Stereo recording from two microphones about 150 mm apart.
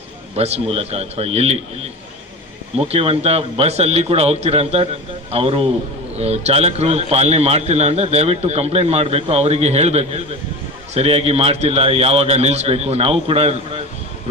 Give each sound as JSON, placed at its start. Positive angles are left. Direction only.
{"t": 0.3, "sound": "a man's voice", "side_deg": -45}
{"t": 2.9, "sound": "a man's voice", "side_deg": -40}